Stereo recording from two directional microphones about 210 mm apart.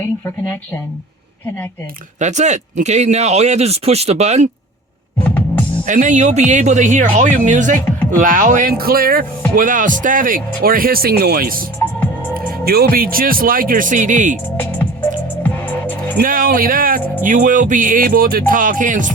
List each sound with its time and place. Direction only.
2.1 s speech: 35° right (ahead or behind)
5.2 s music: 10° left (ahead or behind)
5.8 s speech: 35° right (ahead or behind)
12.6 s speech: 45° right (ahead or behind)
14.5 s speech: 10° left (ahead or behind)
15.4 s music: 10° left (ahead or behind)
16.2 s speech: 40° right (ahead or behind)